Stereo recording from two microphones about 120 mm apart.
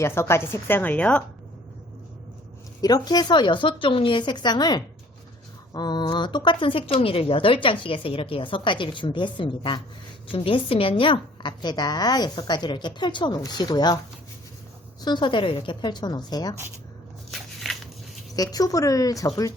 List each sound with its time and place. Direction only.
0.0 s a woman's voice: 20° left (ahead or behind)
2.8 s a woman's voice: 35° left (ahead or behind)
15.0 s a woman's voice: 40° left (ahead or behind)
17.3 s a sound: centre (ahead or behind)
18.3 s a woman's voice: 30° left (ahead or behind)